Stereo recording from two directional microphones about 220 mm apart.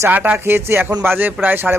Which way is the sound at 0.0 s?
10° right (ahead or behind).